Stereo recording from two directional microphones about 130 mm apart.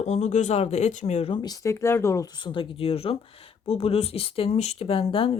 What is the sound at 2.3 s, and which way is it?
Speech, 40° left (ahead or behind).